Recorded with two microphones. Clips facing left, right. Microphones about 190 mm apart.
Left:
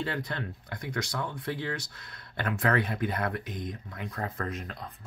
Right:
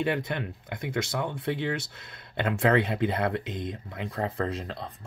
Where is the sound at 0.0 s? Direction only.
20° right (ahead or behind).